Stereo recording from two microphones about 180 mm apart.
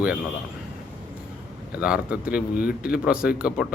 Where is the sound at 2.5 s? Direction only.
55° left (ahead or behind).